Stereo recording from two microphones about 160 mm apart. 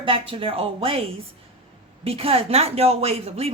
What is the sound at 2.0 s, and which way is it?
A woman's voice, 35° right (ahead or behind).